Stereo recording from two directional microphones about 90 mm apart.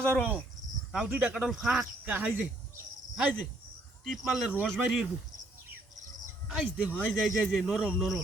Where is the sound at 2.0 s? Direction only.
20° right (ahead or behind).